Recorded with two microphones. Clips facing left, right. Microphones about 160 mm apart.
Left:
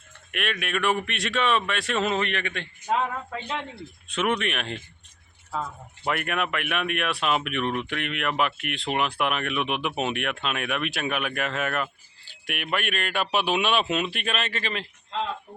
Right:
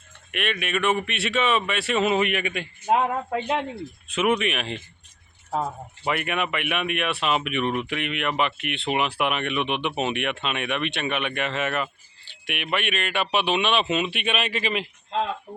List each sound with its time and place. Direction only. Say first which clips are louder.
0.3 s speech: right 2 dB; centre (ahead or behind)
4.1 s speech: right 3 dB; 5° right (ahead or behind)
5.5 s speech: right 5 dB; 35° right (ahead or behind)
6.1 s speech: right 1 dB; centre (ahead or behind)